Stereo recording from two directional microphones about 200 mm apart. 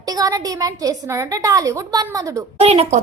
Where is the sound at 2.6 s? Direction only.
30° right (ahead or behind).